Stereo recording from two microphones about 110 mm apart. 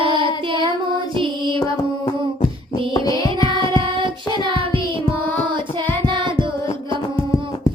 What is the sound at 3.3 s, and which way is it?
Child singing, 50° right (ahead or behind).